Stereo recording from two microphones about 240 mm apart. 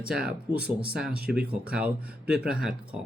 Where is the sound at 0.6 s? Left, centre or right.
Right.